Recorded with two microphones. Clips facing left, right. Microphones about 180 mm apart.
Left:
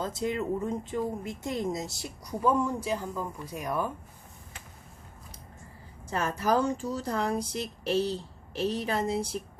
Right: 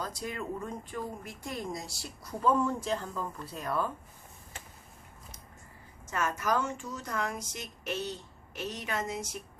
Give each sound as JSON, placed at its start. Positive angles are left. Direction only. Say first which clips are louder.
{"t": 0.0, "sound": "speech", "louder": "left 7 dB", "side_deg": 25}
{"t": 6.1, "sound": "speech", "louder": "left 3 dB", "side_deg": 35}